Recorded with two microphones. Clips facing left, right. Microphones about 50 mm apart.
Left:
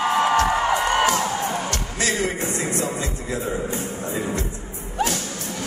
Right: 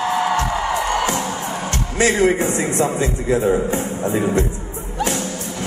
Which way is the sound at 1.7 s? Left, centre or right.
Right.